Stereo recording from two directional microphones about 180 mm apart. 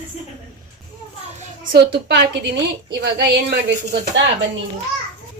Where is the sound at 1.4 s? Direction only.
50° right (ahead or behind); by 4.3 s 70° right (ahead or behind).